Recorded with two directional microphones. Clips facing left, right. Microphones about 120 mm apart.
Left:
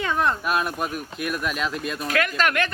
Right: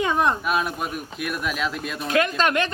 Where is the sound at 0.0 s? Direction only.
20° right (ahead or behind).